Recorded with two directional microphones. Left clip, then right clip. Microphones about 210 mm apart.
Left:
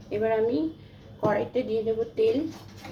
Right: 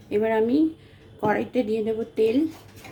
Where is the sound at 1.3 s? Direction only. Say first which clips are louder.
Right 2 dB; 60° right (ahead or behind).